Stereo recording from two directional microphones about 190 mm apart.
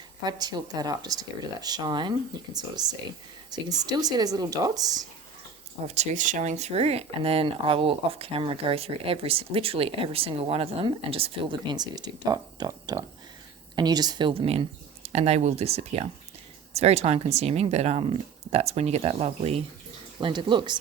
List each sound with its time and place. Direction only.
0.3 s speech: 20° right (ahead or behind)
5.9 s speech: 40° right (ahead or behind)